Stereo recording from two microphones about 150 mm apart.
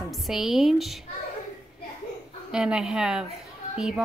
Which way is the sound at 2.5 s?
5° right (ahead or behind).